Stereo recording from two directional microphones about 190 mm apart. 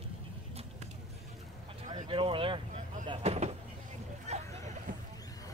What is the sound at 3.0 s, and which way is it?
Vehicle, 30° right (ahead or behind).